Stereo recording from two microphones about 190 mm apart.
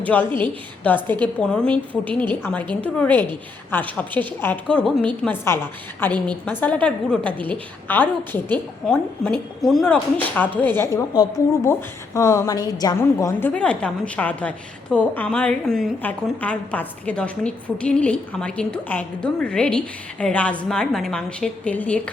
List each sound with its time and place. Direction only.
0.0 s a woman's voice: 10° left (ahead or behind)